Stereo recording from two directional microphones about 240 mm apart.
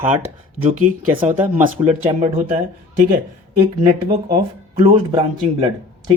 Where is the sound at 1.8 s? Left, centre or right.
Centre.